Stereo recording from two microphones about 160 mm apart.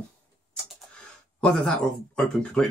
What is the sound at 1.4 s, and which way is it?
Speech, 5° left (ahead or behind).